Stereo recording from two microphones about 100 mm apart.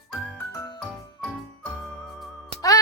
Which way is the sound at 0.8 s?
5° left (ahead or behind).